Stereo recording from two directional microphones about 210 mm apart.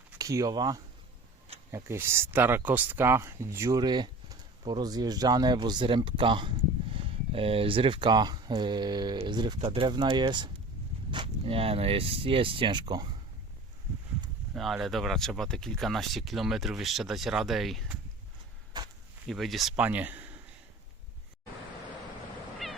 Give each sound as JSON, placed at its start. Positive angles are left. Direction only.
{"t": 0.2, "sound": "speech", "side_deg": -15}
{"t": 14.5, "sound": "speech", "side_deg": 0}
{"t": 18.8, "sound": "a sound", "side_deg": -20}
{"t": 19.3, "sound": "speech", "side_deg": 0}